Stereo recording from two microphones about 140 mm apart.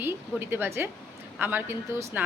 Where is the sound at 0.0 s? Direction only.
15° right (ahead or behind).